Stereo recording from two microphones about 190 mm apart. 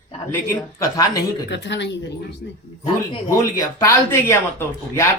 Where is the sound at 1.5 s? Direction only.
65° left (ahead or behind).